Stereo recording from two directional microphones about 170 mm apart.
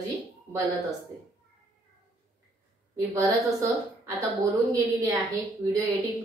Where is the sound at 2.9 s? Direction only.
15° right (ahead or behind).